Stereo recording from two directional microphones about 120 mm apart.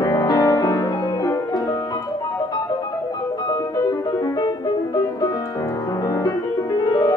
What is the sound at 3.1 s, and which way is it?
Music, 35° left (ahead or behind).